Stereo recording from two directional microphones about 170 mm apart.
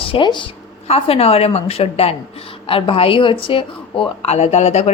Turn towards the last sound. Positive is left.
turn(degrees=40)  # may be behind; listen again after turning